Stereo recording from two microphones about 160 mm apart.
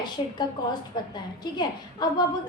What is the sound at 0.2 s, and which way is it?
Speech, 35° left (ahead or behind).